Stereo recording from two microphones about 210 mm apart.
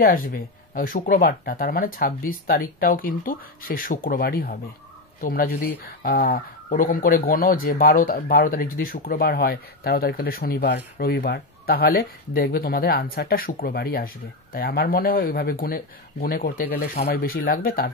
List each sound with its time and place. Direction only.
0.0 s speech: 45° left (ahead or behind)